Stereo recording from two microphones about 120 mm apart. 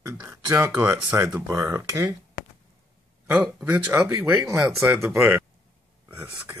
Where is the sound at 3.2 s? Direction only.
20° right (ahead or behind).